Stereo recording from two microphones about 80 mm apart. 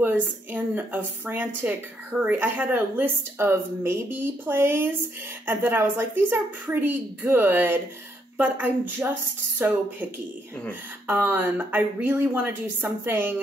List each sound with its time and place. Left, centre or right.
0.0 s speech: right
11.1 s speech: right